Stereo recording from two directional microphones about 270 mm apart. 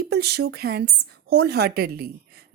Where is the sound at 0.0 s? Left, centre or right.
Right.